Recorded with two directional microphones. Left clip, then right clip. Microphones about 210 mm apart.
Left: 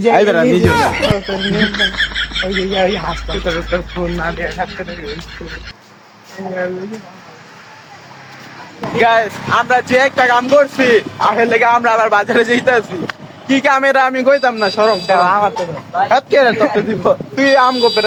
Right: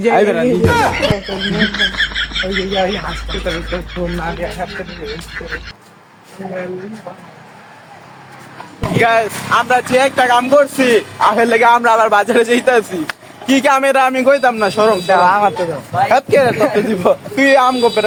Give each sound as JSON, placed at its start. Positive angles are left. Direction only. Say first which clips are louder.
{"t": 0.0, "sound": "speech", "louder": "left 1 dB", "side_deg": 35}
{"t": 0.6, "sound": "speech", "louder": "even", "side_deg": 0}
{"t": 9.0, "sound": "speech", "louder": "left 1 dB", "side_deg": 0}
{"t": 15.0, "sound": "speech", "louder": "right 1 dB", "side_deg": -40}
{"t": 16.0, "sound": "speech", "louder": "left 1 dB", "side_deg": -10}